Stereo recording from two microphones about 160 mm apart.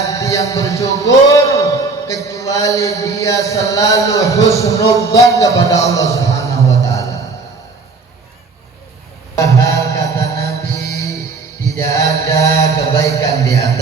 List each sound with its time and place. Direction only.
0.0 s a man's voice: 20° left (ahead or behind)
5.0 s music: 20° left (ahead or behind)
9.4 s music: 20° left (ahead or behind)
11.8 s mantra: 20° left (ahead or behind)